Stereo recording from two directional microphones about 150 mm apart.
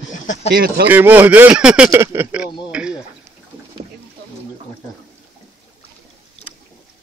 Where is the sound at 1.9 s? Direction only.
15° right (ahead or behind).